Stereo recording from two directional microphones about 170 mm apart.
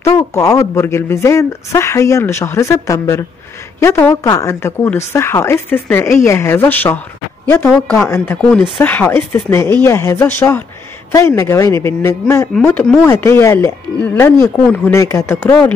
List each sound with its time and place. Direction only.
0.0 s a woman's voice: 20° left (ahead or behind)